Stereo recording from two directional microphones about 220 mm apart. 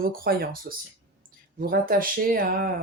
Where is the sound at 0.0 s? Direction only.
40° right (ahead or behind).